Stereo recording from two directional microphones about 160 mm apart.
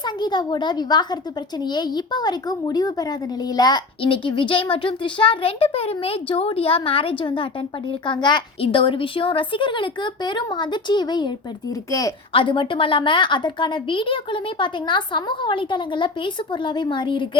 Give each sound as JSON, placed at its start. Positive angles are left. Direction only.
{"t": 0.0, "sound": "a woman's voice", "side_deg": 25}
{"t": 12.3, "sound": "a woman's voice", "side_deg": 35}